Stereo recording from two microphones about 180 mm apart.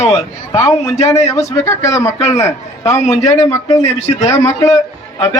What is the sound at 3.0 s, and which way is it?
Speech, 40° left (ahead or behind).